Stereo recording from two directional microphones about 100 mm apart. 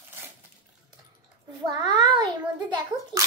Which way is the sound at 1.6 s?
45° right (ahead or behind).